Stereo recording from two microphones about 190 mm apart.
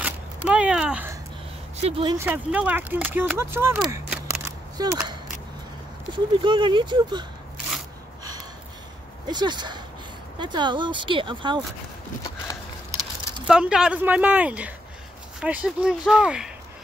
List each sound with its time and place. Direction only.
0.0 s a sound: 5° right (ahead or behind)
1.8 s speech: 30° right (ahead or behind)
2.1 s speech: 10° right (ahead or behind)
4.7 s speech: 15° right (ahead or behind)
6.1 s speech: 25° right (ahead or behind)
9.3 s speech: 20° right (ahead or behind)
13.5 s speech: 5° right (ahead or behind)